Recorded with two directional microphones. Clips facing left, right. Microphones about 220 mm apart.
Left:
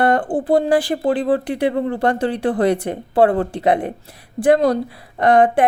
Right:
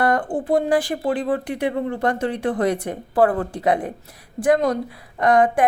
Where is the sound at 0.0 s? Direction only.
30° left (ahead or behind).